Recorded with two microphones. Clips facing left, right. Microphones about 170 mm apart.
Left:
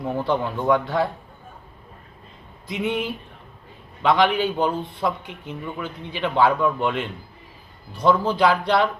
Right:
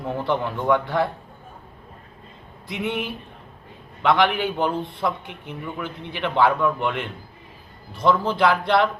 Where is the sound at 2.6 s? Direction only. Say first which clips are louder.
Left 2 dB; 20° left (ahead or behind).